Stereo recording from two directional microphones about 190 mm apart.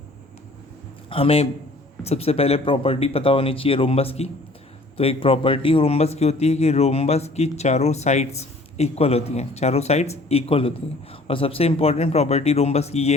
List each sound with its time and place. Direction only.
1.1 s a man's voice: 30° left (ahead or behind)